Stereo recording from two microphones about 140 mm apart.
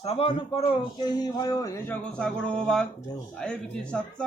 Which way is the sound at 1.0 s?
30° left (ahead or behind).